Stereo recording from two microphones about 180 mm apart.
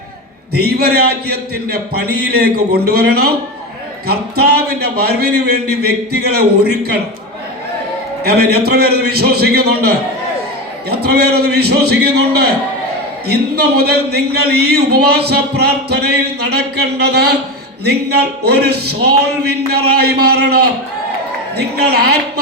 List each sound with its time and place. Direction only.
0.5 s a man's voice: 60° right (ahead or behind)
8.2 s a man's voice: 60° right (ahead or behind)